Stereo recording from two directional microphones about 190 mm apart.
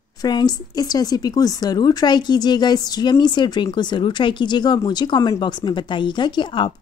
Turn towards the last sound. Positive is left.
turn(degrees=25)  # may be behind; listen again after turning